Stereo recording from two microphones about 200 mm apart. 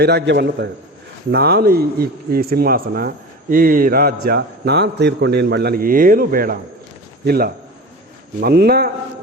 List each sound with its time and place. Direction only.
0.0 s a man's voice: 55° right (ahead or behind)